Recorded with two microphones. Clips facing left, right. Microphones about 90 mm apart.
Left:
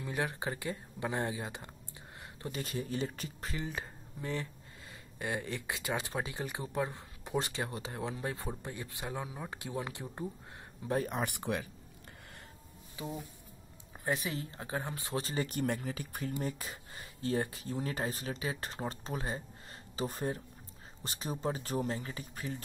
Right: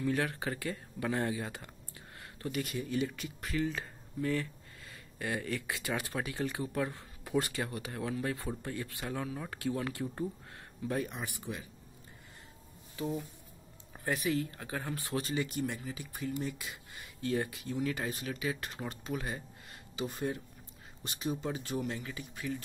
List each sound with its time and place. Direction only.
0.0 s speech: 20° left (ahead or behind)
3.5 s speech: 20° left (ahead or behind)
11.1 s speech: 50° left (ahead or behind)
11.3 s speech: 70° left (ahead or behind)
13.9 s speech: 20° left (ahead or behind)
15.2 s speech: 40° left (ahead or behind)